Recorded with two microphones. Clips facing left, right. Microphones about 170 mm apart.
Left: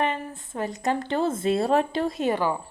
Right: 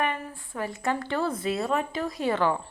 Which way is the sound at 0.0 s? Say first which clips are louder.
Left 2 dB; 25° left (ahead or behind).